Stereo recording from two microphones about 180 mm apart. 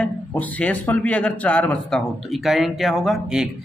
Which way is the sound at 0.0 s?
10° left (ahead or behind).